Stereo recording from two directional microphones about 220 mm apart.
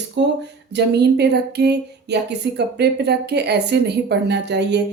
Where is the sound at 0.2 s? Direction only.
55° right (ahead or behind).